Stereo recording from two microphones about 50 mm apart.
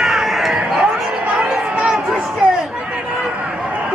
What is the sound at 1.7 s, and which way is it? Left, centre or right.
Run, right.